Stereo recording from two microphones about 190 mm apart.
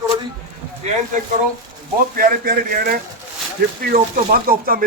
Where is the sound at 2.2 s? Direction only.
50° right (ahead or behind).